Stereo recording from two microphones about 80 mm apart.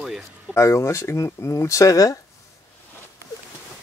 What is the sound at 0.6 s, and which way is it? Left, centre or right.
Speech, left.